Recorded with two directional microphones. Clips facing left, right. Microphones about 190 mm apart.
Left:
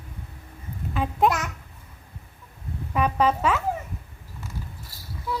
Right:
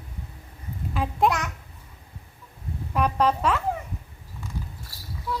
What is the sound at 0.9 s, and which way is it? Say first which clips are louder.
Speech: left 1 dB; centre (ahead or behind).